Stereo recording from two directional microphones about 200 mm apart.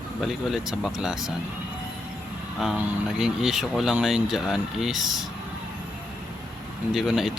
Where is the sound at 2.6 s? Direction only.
Centre (ahead or behind).